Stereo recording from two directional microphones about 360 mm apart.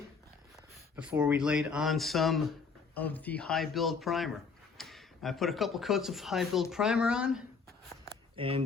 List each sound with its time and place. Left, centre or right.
0.9 s speech: centre
8.4 s speech: centre